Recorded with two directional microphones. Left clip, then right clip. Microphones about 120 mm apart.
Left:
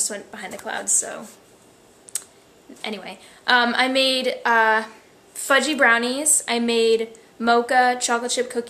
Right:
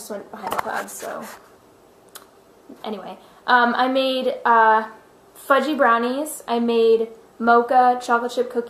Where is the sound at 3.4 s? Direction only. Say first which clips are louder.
Right 1 dB; 45° left (ahead or behind).